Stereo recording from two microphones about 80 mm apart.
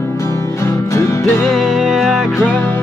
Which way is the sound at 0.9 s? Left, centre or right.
Left.